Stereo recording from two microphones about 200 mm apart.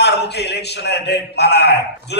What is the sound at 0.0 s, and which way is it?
A man's voice, 55° left (ahead or behind).